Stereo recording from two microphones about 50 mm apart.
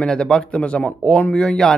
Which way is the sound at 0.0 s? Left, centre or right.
Centre.